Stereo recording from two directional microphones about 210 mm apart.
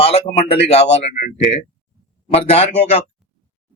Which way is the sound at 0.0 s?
30° left (ahead or behind).